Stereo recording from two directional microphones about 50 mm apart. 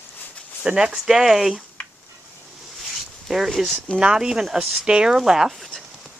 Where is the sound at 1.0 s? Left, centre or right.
Centre.